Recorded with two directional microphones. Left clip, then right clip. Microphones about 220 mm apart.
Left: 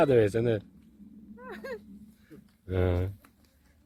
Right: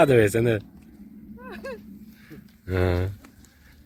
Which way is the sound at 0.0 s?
5° right (ahead or behind).